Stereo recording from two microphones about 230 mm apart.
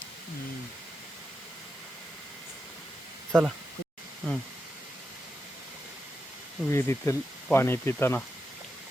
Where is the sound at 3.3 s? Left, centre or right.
Centre.